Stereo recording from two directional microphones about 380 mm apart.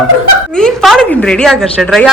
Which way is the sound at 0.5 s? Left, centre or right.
Centre.